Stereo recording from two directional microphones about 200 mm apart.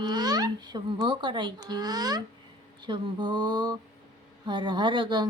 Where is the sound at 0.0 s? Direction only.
20° right (ahead or behind).